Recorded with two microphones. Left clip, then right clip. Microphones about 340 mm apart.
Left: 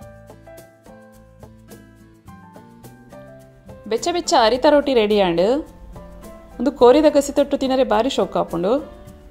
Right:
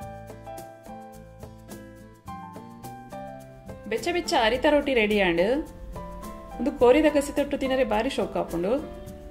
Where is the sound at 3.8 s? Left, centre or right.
Centre.